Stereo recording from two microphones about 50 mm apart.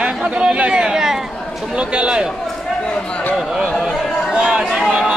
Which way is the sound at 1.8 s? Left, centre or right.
Centre.